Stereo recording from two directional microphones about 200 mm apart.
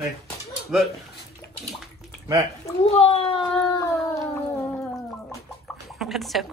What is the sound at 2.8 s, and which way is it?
Speech, 30° left (ahead or behind).